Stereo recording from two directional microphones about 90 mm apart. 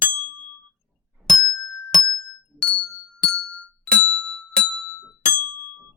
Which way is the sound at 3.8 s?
10° left (ahead or behind).